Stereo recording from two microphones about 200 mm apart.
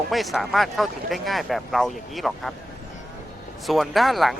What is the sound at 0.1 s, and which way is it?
Speech, centre (ahead or behind).